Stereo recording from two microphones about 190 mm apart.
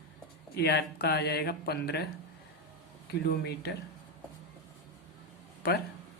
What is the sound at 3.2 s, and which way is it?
Speech, 60° left (ahead or behind).